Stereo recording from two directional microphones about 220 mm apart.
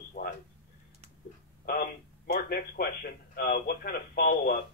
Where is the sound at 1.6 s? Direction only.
40° left (ahead or behind).